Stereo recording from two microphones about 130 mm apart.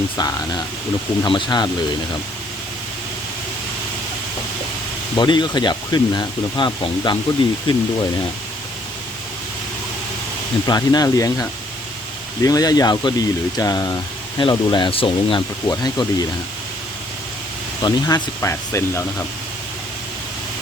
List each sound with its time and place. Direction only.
0.2 s speech: 30° left (ahead or behind)
5.1 s speech: 35° left (ahead or behind)
10.7 s speech: 30° left (ahead or behind)
15.6 s speech: 30° left (ahead or behind)
17.8 s speech: 30° left (ahead or behind)